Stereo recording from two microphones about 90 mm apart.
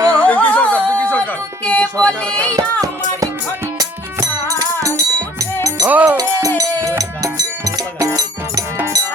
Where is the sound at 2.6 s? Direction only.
40° right (ahead or behind).